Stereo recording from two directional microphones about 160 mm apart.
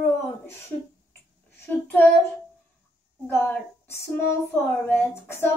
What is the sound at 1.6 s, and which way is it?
Child singing, 10° left (ahead or behind).